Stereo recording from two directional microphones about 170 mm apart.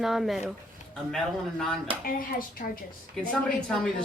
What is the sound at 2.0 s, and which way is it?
Speech, 55° left (ahead or behind).